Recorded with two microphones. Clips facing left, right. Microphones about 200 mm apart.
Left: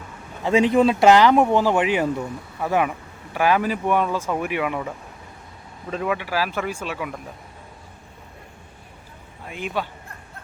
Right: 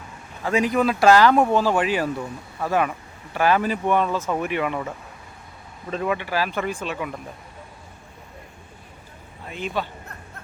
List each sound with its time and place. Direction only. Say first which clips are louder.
0.4 s speech: left 4 dB; 25° left (ahead or behind); by 7.2 s 5° left (ahead or behind)
9.5 s speech: even; 10° left (ahead or behind)